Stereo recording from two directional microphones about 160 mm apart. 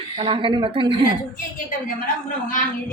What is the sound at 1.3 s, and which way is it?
A woman's voice, 60° left (ahead or behind).